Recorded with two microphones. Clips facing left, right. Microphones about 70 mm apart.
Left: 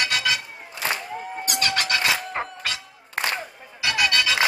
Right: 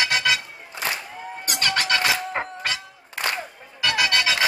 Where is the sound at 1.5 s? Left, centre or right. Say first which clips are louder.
Right 2 dB; right.